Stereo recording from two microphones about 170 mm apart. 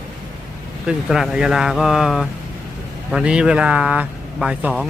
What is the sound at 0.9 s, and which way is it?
Speech, centre (ahead or behind).